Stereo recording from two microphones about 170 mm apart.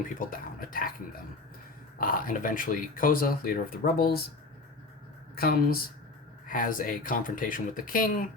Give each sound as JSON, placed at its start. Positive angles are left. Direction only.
{"t": 0.0, "sound": "speech", "side_deg": 55}
{"t": 5.3, "sound": "speech", "side_deg": 65}
{"t": 6.5, "sound": "speech", "side_deg": 55}